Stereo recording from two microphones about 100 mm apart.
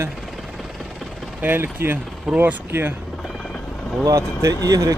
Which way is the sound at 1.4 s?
20° right (ahead or behind).